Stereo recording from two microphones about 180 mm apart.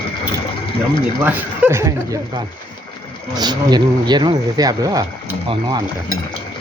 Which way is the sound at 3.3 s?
20° right (ahead or behind).